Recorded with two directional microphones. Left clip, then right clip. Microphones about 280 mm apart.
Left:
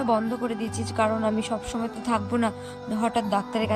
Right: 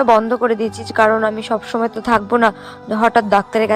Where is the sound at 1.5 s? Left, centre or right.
Right.